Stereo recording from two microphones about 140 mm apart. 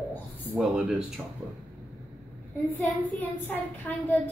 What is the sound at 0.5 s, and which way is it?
Speech, 5° right (ahead or behind).